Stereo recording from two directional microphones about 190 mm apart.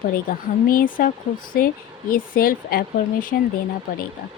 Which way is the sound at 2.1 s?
50° left (ahead or behind).